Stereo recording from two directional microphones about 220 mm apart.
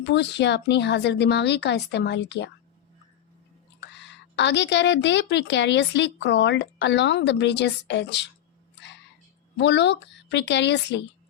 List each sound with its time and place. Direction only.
0.0 s speech: 50° left (ahead or behind)
3.8 s speech: 50° left (ahead or behind)
9.6 s speech: 50° left (ahead or behind)